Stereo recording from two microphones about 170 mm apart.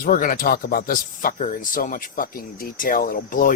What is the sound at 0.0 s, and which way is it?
Speech, 55° left (ahead or behind).